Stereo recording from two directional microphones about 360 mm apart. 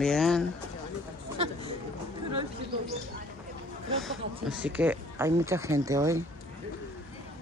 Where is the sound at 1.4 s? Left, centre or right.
Centre.